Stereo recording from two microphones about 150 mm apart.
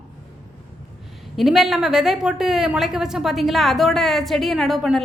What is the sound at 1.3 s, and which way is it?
A woman's voice, centre (ahead or behind).